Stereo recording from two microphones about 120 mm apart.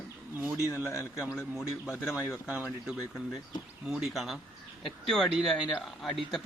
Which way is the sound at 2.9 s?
5° right (ahead or behind).